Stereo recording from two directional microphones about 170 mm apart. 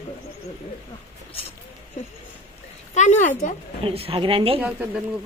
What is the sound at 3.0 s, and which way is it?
Speech, 45° left (ahead or behind).